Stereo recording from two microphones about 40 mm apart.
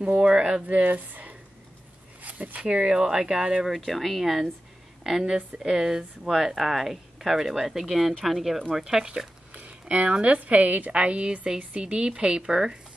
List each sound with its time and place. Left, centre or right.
0.0 s speech: right
0.8 s speech: right
2.2 s a sound: right
2.6 s speech: right
3.7 s speech: centre
9.5 s a sound: right
10.2 s a woman's voice: right